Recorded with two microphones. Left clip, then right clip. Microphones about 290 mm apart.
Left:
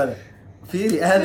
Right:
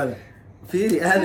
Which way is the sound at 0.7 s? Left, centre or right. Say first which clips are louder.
Left 1 dB; centre.